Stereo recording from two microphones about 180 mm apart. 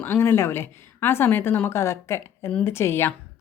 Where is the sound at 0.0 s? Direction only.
10° left (ahead or behind).